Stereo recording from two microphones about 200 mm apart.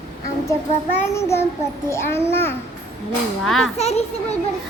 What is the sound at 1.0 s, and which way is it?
A child's voice, 15° left (ahead or behind).